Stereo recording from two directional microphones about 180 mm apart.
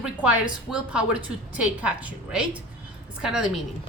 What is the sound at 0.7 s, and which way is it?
A woman's voice, 5° right (ahead or behind).